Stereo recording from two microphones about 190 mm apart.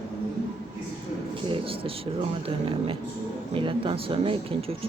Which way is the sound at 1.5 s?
30° right (ahead or behind).